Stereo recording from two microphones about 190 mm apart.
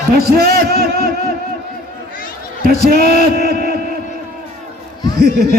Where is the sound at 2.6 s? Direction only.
50° right (ahead or behind).